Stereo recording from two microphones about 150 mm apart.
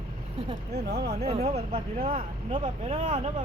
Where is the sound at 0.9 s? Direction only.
90° right.